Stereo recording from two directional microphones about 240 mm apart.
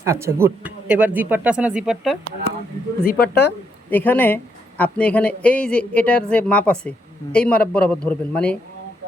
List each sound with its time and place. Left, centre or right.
0.0 s speech: centre
3.0 s speech: left
3.8 s a woman's voice: centre